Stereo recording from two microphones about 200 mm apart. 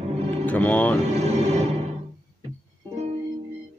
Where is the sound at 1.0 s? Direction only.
30° right (ahead or behind).